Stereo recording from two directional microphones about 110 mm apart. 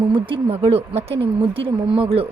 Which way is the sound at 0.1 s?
55° right (ahead or behind).